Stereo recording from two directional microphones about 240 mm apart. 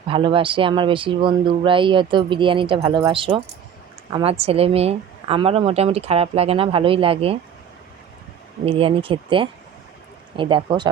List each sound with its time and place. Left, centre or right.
0.1 s speech: right
8.6 s speech: right